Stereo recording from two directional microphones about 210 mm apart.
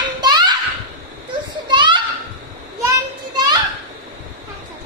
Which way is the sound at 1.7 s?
20° right (ahead or behind).